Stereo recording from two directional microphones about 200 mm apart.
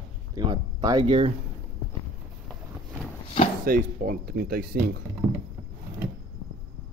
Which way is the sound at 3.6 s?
45° right (ahead or behind).